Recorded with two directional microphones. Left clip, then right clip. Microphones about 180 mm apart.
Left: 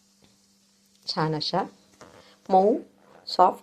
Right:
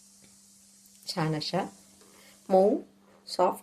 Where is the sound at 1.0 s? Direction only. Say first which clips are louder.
Left 5 dB; 15° left (ahead or behind).